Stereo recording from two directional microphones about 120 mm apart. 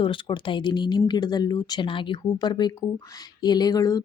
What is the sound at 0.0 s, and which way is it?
Speech, 45° left (ahead or behind).